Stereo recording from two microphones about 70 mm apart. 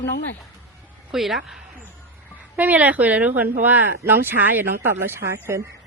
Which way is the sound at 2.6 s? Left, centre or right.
Right.